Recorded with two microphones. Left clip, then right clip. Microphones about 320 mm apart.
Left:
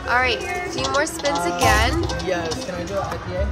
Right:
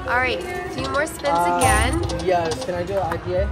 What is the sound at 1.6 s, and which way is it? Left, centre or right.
Speech, centre.